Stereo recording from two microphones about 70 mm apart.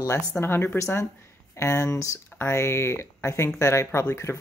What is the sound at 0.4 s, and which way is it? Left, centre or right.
Speech, left.